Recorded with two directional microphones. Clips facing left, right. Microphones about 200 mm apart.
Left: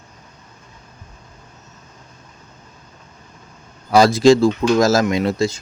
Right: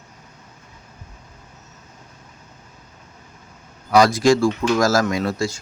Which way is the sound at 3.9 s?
25° left (ahead or behind).